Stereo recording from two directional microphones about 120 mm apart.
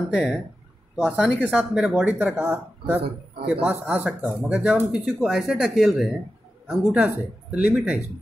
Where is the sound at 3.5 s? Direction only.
10° right (ahead or behind).